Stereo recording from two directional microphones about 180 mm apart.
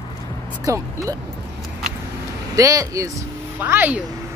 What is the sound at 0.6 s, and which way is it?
Speech, 20° right (ahead or behind).